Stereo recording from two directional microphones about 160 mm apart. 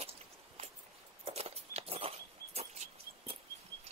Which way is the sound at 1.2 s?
40° right (ahead or behind).